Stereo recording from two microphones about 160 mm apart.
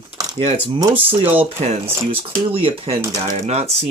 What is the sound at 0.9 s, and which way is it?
Speech, 35° right (ahead or behind).